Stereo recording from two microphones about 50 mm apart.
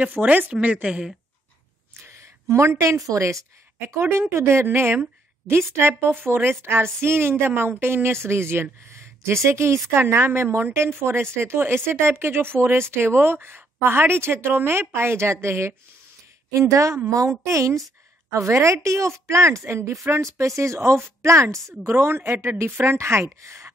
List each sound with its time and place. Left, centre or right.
0.0 s a woman's voice: right
2.0 s a sound: right
2.8 s a woman's voice: right
3.9 s a woman's voice: right
16.5 s a woman's voice: right
18.3 s a woman's voice: right
21.6 s a woman's voice: right